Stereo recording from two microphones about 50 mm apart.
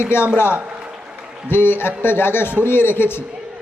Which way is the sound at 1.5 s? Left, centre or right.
Left.